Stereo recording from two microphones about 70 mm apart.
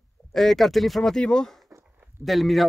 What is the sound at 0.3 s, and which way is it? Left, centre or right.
Speech, centre.